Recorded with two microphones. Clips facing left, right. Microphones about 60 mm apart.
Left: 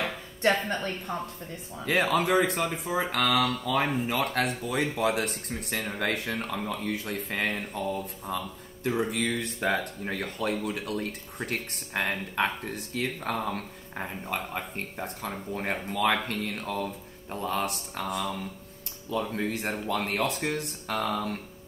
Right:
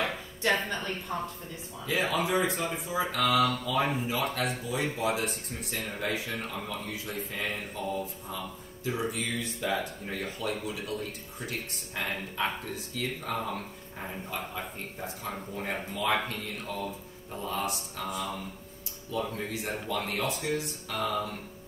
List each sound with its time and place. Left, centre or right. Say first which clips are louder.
1.1 s speech: even; centre
1.9 s speech: left 4 dB; left
9.1 s speech: left 4 dB; left
15.9 s speech: left 3 dB; left
19.3 s speech: left 4 dB; left